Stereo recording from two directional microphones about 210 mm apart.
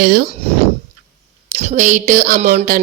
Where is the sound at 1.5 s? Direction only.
35° right (ahead or behind).